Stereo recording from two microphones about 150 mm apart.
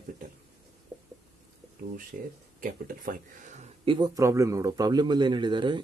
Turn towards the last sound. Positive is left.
turn(degrees=-30)  # may be behind; listen again after turning